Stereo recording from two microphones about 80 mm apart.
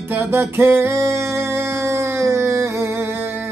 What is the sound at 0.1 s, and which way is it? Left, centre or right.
Music, right.